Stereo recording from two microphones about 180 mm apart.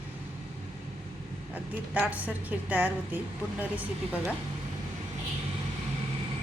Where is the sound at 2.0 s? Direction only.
10° right (ahead or behind).